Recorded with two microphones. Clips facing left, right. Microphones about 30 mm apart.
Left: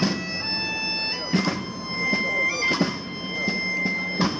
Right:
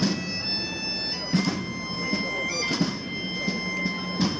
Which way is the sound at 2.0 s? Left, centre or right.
Centre.